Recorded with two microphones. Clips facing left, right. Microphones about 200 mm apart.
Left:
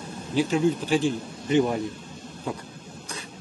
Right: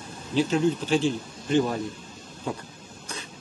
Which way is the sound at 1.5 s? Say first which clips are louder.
Left 2 dB; 15° left (ahead or behind).